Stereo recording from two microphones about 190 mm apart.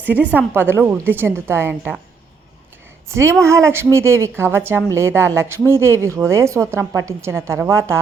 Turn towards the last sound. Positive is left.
turn(degrees=-15)  # may be behind; listen again after turning